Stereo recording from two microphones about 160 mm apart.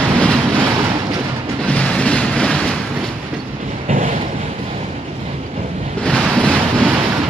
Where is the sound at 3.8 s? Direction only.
45° right (ahead or behind).